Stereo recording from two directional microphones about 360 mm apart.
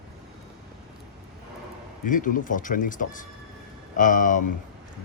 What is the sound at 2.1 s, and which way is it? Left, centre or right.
Speech, left.